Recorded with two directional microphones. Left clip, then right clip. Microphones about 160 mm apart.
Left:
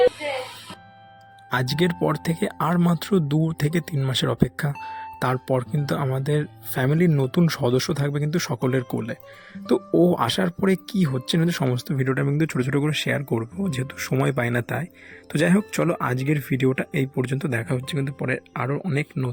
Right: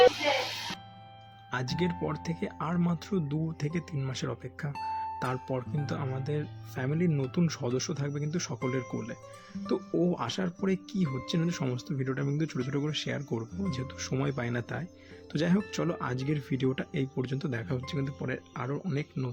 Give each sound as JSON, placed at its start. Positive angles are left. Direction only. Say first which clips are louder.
{"t": 1.5, "sound": "speech", "louder": "left 9 dB", "side_deg": 55}
{"t": 4.8, "sound": "speech", "louder": "even", "side_deg": -25}
{"t": 5.2, "sound": "speech", "louder": "left 10 dB", "side_deg": 55}